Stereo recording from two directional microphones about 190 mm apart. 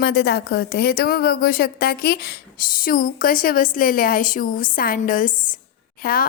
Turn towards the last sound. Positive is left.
turn(degrees=50)  # may be behind; listen again after turning